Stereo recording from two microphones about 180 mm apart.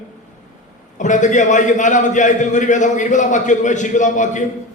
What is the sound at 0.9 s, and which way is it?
A man's voice, 45° left (ahead or behind).